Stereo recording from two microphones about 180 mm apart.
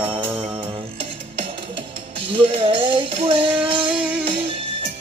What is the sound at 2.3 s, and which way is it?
Music, 30° right (ahead or behind).